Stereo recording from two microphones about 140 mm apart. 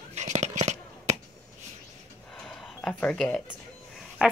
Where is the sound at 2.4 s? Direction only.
5° left (ahead or behind).